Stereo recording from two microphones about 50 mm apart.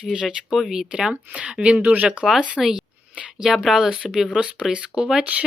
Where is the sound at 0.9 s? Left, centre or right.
Centre.